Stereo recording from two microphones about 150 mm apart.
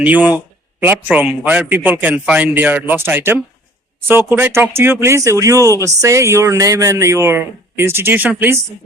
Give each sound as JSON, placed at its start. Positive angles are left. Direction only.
{"t": 0.0, "sound": "speech", "side_deg": -10}